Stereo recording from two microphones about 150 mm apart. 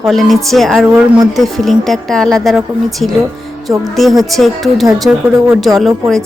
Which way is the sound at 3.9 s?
Centre (ahead or behind).